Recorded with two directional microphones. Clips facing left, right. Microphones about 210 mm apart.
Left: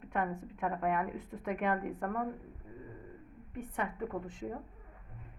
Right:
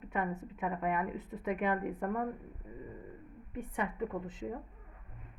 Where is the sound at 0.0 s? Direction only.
5° right (ahead or behind).